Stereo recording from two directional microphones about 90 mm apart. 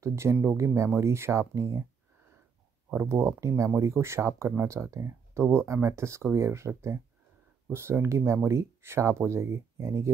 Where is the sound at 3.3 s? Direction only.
35° right (ahead or behind).